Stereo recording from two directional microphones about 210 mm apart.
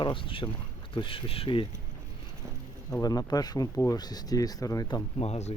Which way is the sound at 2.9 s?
15° left (ahead or behind).